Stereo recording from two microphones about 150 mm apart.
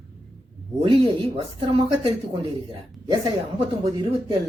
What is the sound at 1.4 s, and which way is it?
A woman's voice, 35° right (ahead or behind).